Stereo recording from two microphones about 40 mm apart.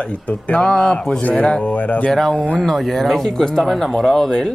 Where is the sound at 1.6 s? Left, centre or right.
Left.